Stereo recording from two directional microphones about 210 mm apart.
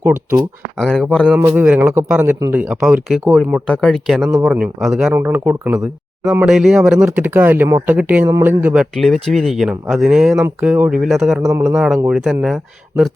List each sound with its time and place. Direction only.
0.0 s speech: 10° right (ahead or behind)
0.9 s speech: 5° left (ahead or behind)
1.4 s speech: 10° right (ahead or behind)
11.4 s speech: 10° right (ahead or behind)